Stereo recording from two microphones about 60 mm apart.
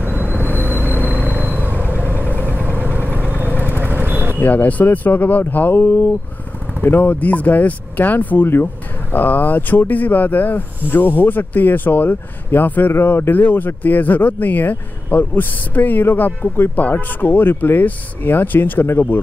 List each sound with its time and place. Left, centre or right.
0.0 s vehicle: right
2.3 s vehicle: left
2.6 s vehicle: right
4.4 s speech: left
12.9 s speech: left